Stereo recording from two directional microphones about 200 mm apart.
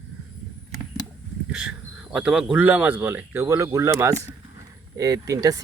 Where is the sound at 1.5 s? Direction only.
5° right (ahead or behind).